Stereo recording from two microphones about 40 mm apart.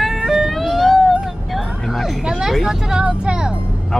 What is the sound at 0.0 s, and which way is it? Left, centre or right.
Vehicle, centre.